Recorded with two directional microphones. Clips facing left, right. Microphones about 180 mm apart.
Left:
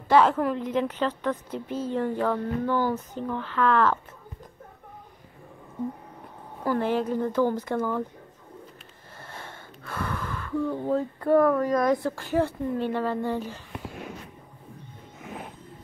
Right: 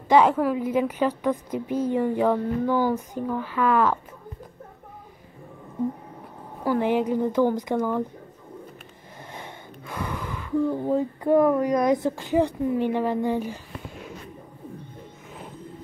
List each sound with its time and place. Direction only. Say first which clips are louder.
0.1 s a woman's voice: right 2 dB; 10° right (ahead or behind)
6.6 s a woman's voice: right 3 dB; 15° right (ahead or behind)
9.3 s speech: right 3 dB; 15° right (ahead or behind)